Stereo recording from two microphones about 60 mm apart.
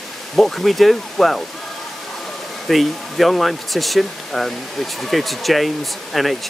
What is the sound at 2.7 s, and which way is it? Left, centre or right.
Speech, centre.